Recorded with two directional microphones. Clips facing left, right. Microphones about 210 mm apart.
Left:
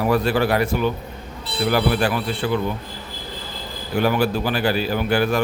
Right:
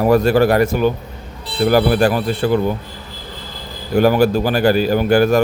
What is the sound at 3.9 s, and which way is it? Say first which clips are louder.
Speech: right 7 dB; 40° right (ahead or behind).